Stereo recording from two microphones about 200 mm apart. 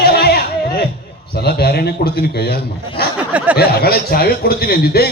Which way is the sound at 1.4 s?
50° left (ahead or behind).